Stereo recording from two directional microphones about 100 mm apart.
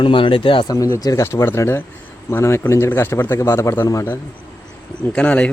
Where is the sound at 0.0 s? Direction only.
60° left (ahead or behind).